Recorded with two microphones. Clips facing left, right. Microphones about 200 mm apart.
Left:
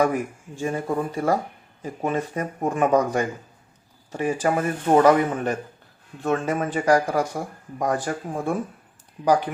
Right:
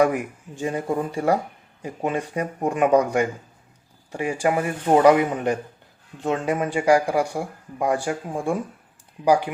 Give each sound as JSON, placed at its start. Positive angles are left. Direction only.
{"t": 0.0, "sound": "speech", "side_deg": -15}